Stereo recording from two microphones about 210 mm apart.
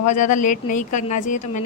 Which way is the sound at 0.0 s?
35° left (ahead or behind).